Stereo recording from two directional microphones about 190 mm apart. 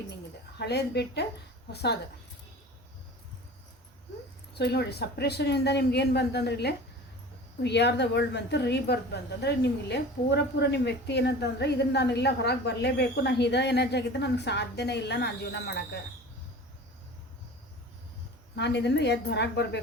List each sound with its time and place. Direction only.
0.6 s speech: 60° left (ahead or behind)
4.5 s speech: 60° left (ahead or behind)
18.5 s speech: 65° left (ahead or behind)